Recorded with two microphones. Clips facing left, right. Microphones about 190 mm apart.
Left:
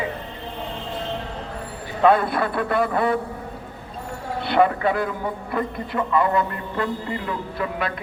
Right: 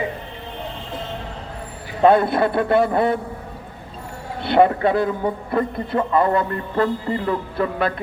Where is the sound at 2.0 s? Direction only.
25° right (ahead or behind).